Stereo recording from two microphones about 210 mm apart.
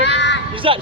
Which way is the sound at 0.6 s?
25° right (ahead or behind).